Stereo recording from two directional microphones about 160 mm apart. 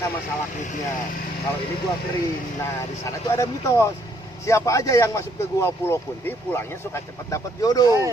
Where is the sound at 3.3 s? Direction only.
20° left (ahead or behind).